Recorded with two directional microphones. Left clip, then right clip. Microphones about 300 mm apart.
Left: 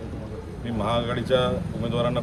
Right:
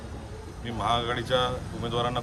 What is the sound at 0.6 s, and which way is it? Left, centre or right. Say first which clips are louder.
Speech: left 1 dB; centre.